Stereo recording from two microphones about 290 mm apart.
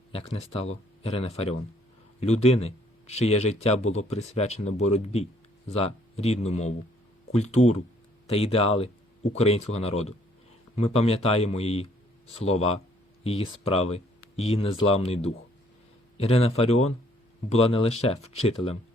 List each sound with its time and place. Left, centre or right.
0.1 s speech: centre